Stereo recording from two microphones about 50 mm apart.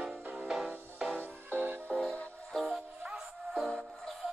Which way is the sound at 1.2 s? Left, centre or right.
Right.